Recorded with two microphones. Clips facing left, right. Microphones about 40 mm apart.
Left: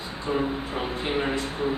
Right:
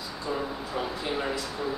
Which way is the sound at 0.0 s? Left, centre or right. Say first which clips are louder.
Left 5 dB; left.